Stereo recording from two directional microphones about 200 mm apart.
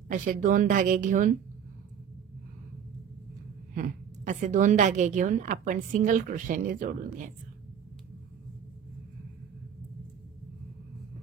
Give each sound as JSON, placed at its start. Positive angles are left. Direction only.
{"t": 0.1, "sound": "a woman's voice", "side_deg": -40}
{"t": 3.7, "sound": "a woman's voice", "side_deg": -40}